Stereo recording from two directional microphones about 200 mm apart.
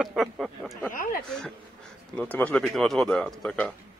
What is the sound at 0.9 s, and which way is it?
Speech, 45° left (ahead or behind).